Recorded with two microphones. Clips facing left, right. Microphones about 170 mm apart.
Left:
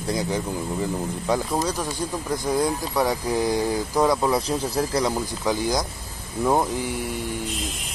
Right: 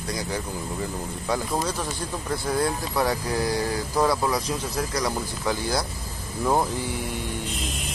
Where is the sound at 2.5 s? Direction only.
15° left (ahead or behind).